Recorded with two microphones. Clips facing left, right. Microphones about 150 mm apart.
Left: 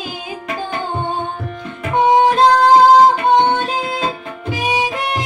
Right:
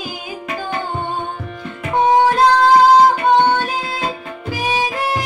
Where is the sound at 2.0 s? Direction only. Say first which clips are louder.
Left 1 dB; 15° left (ahead or behind).